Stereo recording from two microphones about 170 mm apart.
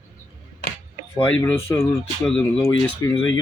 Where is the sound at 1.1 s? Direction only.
20° left (ahead or behind).